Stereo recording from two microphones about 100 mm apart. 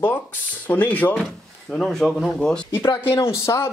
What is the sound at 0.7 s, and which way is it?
Speech, 15° left (ahead or behind).